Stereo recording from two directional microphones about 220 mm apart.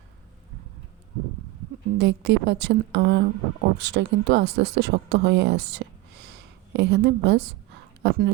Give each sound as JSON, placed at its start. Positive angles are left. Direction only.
{"t": 2.0, "sound": "speech", "side_deg": -50}